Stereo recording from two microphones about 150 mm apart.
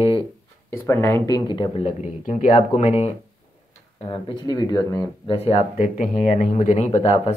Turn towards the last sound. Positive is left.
turn(degrees=45)  # may be behind; listen again after turning